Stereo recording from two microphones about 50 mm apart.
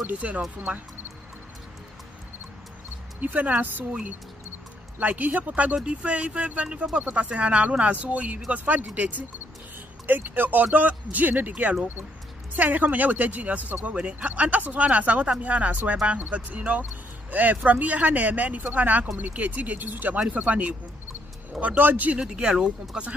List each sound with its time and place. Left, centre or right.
0.2 s speech: right
3.2 s speech: right
4.9 s speech: right
22.2 s speech: centre